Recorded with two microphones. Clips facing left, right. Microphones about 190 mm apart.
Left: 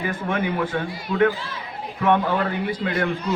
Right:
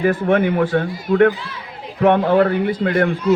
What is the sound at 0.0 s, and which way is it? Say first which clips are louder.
A man's voice: right 9 dB; 55° right (ahead or behind).